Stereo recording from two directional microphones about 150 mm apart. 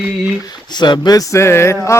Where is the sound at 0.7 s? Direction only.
30° left (ahead or behind).